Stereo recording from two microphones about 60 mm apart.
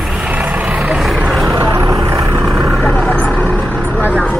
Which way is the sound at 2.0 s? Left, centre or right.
Right.